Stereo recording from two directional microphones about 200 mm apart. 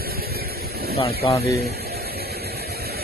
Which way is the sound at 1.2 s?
25° left (ahead or behind).